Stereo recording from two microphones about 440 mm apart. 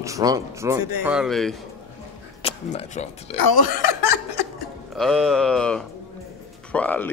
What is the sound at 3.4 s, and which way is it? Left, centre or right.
Chuckle, left.